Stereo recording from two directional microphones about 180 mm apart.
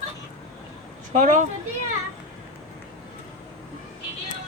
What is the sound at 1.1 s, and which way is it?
Speech, 45° right (ahead or behind).